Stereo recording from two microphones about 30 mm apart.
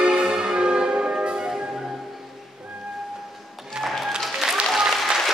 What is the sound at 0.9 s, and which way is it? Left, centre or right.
Music, right.